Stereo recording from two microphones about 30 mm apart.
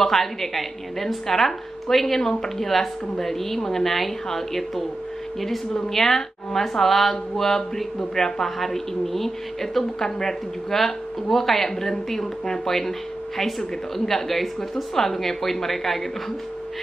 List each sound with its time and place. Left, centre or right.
0.0 s a woman's voice: centre
5.9 s a woman's voice: centre
14.4 s a woman's voice: centre